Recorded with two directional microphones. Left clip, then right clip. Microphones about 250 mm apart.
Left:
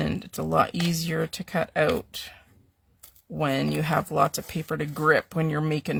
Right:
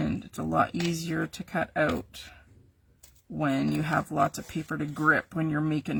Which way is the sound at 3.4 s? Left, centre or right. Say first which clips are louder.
Left 2 dB; left.